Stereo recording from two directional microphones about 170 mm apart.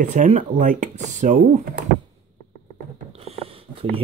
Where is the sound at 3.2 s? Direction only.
35° right (ahead or behind).